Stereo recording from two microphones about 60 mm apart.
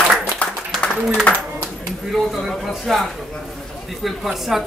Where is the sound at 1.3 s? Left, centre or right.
Left.